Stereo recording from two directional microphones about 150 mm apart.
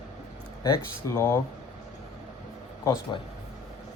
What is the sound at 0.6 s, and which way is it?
Speech, 20° left (ahead or behind).